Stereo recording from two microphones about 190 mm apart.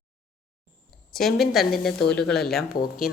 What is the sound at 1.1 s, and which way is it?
A woman's voice, centre (ahead or behind).